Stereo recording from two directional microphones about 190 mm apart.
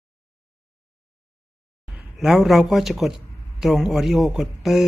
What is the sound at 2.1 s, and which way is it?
Speech, centre (ahead or behind).